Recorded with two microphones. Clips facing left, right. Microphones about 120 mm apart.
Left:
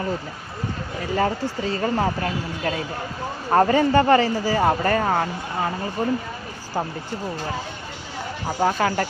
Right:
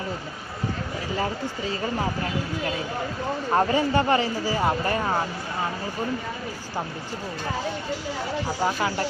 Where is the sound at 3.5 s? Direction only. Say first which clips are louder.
Left 5 dB; 50° left (ahead or behind).